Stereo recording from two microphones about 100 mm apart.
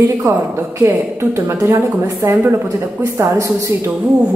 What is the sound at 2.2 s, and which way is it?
Speech, 25° right (ahead or behind).